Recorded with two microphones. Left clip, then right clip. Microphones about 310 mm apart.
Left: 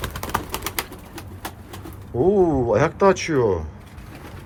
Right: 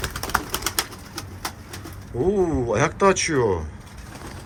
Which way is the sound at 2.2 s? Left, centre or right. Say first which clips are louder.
Left 4 dB; centre.